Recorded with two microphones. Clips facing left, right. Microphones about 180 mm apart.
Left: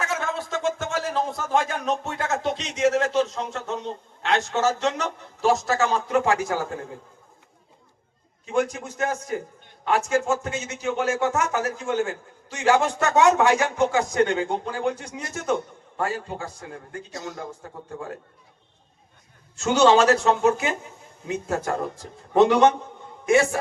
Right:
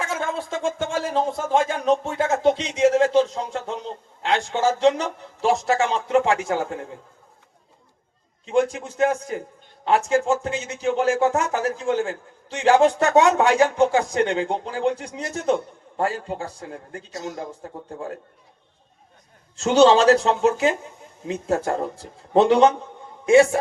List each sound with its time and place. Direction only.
0.0 s a man's voice: 30° right (ahead or behind)
8.5 s a man's voice: 30° right (ahead or behind)
19.5 s a man's voice: 35° right (ahead or behind)